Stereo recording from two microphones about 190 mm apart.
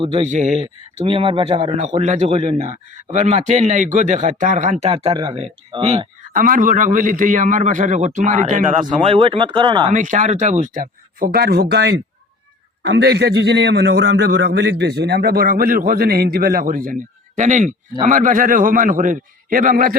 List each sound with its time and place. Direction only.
0.0 s a man's voice: 35° right (ahead or behind)
6.3 s a man's voice: 45° right (ahead or behind)
8.9 s speech: 30° right (ahead or behind)
9.9 s a man's voice: 40° right (ahead or behind)